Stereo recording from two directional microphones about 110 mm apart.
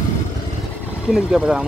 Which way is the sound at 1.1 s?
5° right (ahead or behind).